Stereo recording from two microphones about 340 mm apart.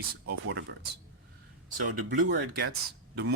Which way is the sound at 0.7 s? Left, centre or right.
Right.